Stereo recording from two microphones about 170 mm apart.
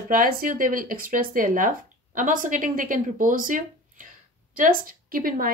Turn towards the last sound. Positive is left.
turn(degrees=-55)  # may be behind; listen again after turning